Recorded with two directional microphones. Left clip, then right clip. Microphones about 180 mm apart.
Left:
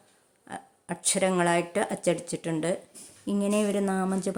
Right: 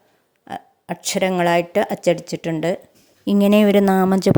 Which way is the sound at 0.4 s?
30° right (ahead or behind).